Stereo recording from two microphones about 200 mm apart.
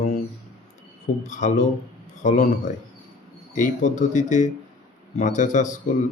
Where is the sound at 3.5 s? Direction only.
40° left (ahead or behind).